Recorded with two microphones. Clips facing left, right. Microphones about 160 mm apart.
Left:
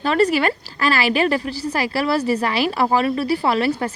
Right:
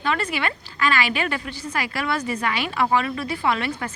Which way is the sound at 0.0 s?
40° left (ahead or behind).